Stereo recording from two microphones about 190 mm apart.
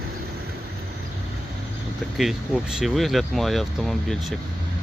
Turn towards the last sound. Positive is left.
turn(degrees=0)  # may be behind; listen again after turning